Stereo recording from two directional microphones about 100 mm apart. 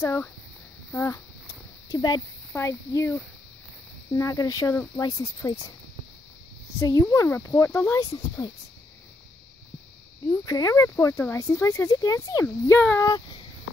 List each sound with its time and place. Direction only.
0.0 s speech: 25° left (ahead or behind)
0.9 s a sound: 25° left (ahead or behind)
2.5 s speech: 30° left (ahead or behind)
4.1 s speech: 35° left (ahead or behind)
6.8 s speech: 30° left (ahead or behind)
10.4 s speech: 35° left (ahead or behind)
12.7 s speech: 20° left (ahead or behind)